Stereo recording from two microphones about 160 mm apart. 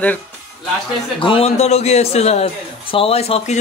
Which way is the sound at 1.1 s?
35° left (ahead or behind).